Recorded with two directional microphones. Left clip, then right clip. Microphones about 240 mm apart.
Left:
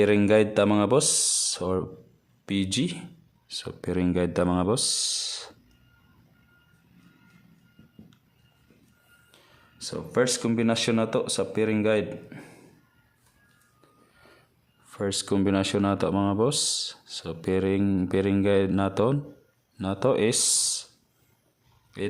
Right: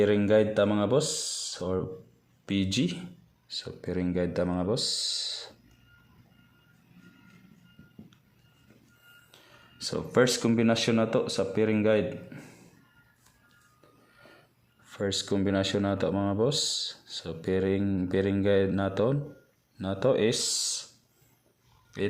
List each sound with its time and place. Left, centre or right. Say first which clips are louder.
0.0 s speech: left 3 dB; centre
4.9 s speech: left 2 dB; left
5.2 s music: left 1 dB; centre
9.3 s speech: right 2 dB; centre
14.9 s speech: left 2 dB; centre
21.9 s speech: right 1 dB; centre